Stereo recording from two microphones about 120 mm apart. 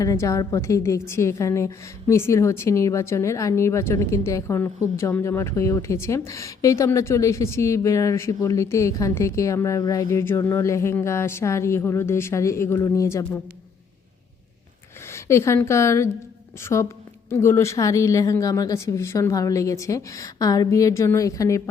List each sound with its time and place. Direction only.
0.0 s a woman's voice: 30° left (ahead or behind)
15.1 s a woman's voice: 25° left (ahead or behind)